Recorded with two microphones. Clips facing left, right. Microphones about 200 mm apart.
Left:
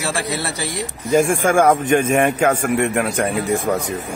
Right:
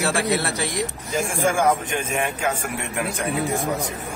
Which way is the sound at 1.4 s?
55° left (ahead or behind).